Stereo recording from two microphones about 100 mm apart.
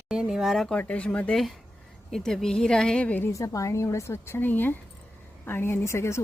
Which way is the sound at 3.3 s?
35° left (ahead or behind).